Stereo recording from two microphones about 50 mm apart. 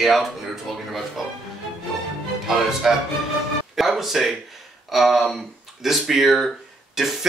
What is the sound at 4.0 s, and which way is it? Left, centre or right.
Speech, centre.